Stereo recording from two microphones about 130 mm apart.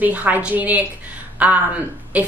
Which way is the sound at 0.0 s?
10° right (ahead or behind).